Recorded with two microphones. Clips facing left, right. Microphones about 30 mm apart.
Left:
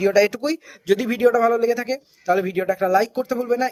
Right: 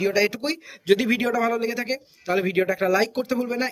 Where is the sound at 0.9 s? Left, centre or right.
Right.